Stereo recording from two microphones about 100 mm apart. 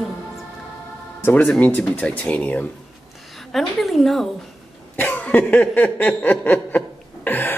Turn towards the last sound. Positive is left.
turn(degrees=20)  # may be behind; listen again after turning